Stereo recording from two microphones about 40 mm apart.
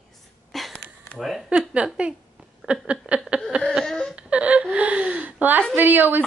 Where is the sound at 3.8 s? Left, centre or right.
Centre.